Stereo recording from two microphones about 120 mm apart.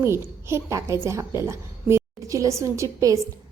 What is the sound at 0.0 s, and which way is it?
A woman's voice, 20° right (ahead or behind).